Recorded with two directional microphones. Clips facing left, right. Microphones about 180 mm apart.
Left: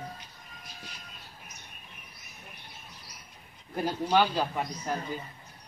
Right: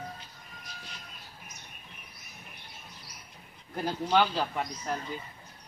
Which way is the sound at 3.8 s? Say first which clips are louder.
Left 1 dB; 10° left (ahead or behind).